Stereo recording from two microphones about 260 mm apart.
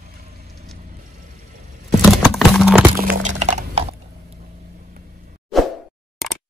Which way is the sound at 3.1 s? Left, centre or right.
Right.